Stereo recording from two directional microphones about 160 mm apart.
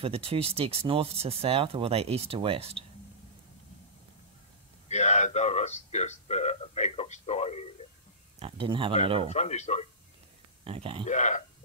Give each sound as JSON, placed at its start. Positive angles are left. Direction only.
{"t": 0.0, "sound": "speech", "side_deg": -35}
{"t": 4.8, "sound": "a man's voice", "side_deg": 45}
{"t": 8.4, "sound": "speech", "side_deg": -35}
{"t": 9.3, "sound": "a man's voice", "side_deg": 45}
{"t": 10.6, "sound": "speech", "side_deg": -35}
{"t": 11.1, "sound": "a man's voice", "side_deg": 50}